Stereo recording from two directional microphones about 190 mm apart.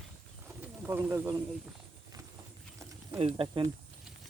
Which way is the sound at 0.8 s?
15° right (ahead or behind).